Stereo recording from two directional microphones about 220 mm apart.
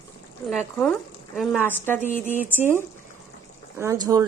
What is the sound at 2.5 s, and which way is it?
Speech, 10° right (ahead or behind).